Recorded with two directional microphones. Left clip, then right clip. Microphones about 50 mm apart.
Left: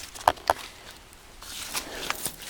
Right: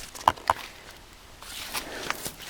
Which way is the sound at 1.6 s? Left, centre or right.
Centre.